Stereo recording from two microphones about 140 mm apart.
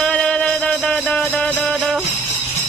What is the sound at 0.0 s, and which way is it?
Music, 5° left (ahead or behind).